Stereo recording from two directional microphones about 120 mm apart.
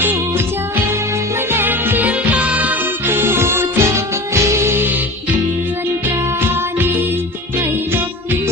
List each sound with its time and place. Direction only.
0.0 s music: 20° right (ahead or behind)